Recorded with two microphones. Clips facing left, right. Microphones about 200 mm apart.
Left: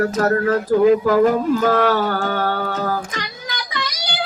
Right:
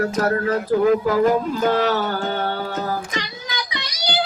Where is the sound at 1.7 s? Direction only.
50° left (ahead or behind).